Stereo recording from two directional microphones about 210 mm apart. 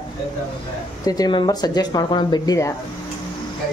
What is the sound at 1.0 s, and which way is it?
Speech, 20° left (ahead or behind).